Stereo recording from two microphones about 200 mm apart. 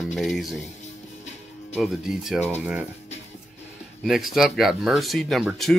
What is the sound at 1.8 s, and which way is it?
Speech, centre (ahead or behind).